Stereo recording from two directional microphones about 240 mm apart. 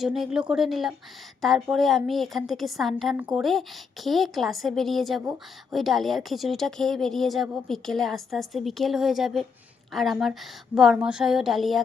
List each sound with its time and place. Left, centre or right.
0.0 s a woman's voice: centre